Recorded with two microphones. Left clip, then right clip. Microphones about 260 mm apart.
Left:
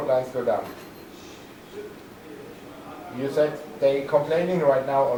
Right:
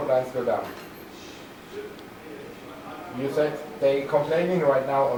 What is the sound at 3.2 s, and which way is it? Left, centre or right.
Speech, centre.